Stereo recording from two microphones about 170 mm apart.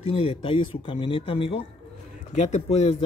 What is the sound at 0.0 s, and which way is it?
Speech, 35° left (ahead or behind).